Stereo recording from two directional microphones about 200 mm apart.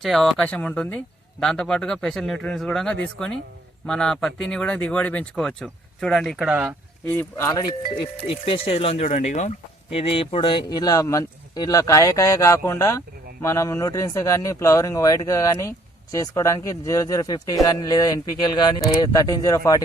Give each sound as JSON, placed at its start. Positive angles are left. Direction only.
{"t": 0.0, "sound": "speech", "side_deg": 0}
{"t": 7.1, "sound": "speech", "side_deg": 10}